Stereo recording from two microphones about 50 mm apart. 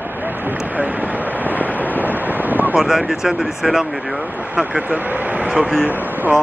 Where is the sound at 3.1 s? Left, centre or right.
Centre.